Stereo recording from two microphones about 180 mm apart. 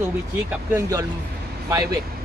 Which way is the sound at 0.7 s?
15° right (ahead or behind).